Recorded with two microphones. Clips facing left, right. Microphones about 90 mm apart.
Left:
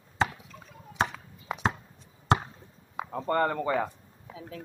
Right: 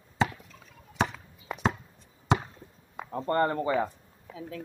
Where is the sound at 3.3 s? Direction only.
90° left.